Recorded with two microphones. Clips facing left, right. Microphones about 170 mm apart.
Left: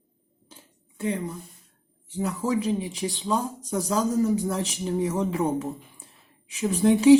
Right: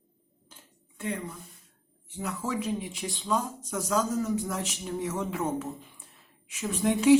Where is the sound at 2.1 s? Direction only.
35° left (ahead or behind).